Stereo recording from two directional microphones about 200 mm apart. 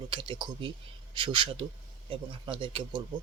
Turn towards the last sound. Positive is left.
turn(degrees=-25)  # may be behind; listen again after turning